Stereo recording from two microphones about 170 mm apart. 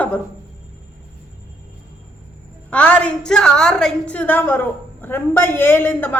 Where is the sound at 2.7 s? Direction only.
10° left (ahead or behind).